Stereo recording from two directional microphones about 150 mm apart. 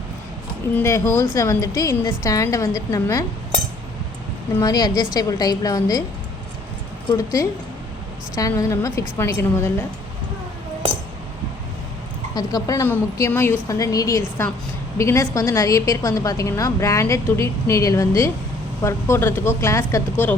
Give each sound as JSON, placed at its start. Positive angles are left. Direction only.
{"t": 0.7, "sound": "a woman's voice", "side_deg": 15}
{"t": 4.5, "sound": "a woman's voice", "side_deg": 25}
{"t": 7.1, "sound": "a woman's voice", "side_deg": 20}
{"t": 12.3, "sound": "a woman's voice", "side_deg": 25}